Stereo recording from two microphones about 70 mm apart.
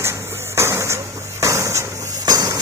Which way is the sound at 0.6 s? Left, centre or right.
Right.